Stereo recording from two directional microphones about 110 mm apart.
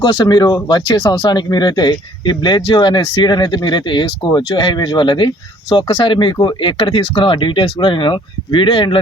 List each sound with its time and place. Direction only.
0.0 s speech: 45° left (ahead or behind)